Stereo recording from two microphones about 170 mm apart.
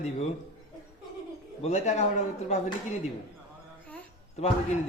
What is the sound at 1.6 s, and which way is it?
Speech, 40° left (ahead or behind).